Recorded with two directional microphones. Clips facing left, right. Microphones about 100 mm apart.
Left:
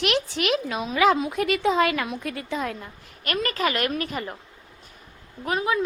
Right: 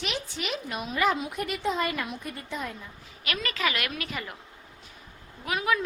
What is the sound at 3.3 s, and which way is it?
A woman's voice, 45° left (ahead or behind).